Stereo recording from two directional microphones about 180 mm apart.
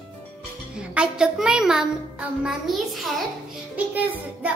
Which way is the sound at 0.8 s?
5° right (ahead or behind).